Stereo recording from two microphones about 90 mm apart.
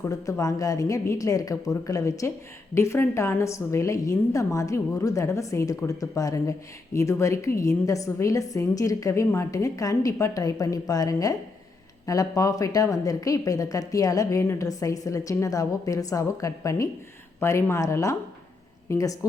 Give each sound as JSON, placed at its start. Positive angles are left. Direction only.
{"t": 0.0, "sound": "speech", "side_deg": 35}